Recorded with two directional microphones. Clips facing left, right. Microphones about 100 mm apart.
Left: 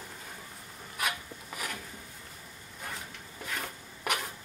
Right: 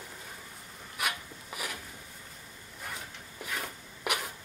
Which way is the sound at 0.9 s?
5° right (ahead or behind).